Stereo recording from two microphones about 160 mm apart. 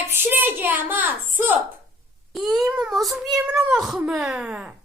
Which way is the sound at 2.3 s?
Centre (ahead or behind).